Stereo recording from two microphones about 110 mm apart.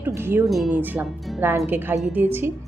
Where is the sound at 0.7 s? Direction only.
15° right (ahead or behind).